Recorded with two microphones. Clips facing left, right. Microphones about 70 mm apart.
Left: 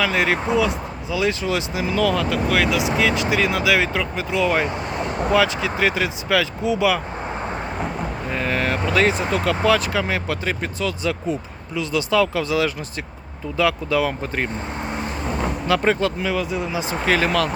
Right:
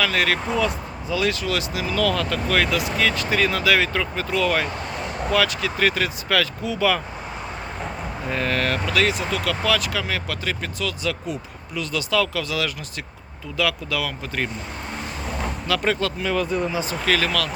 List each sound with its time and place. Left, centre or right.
0.0 s speech: centre
8.3 s speech: centre
8.9 s speech: left
14.9 s vehicle: left
16.3 s speech: centre
16.7 s speech: left